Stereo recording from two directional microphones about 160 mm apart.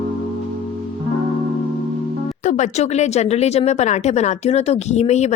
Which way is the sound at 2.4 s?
45° left (ahead or behind).